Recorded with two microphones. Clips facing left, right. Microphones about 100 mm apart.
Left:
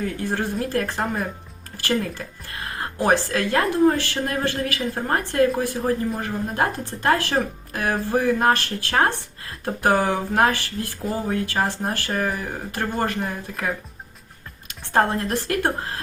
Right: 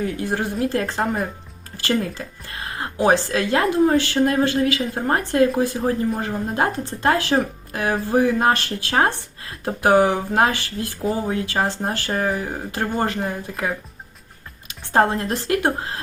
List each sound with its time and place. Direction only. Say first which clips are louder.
0.0 s a woman's voice: right 2 dB; 15° right (ahead or behind)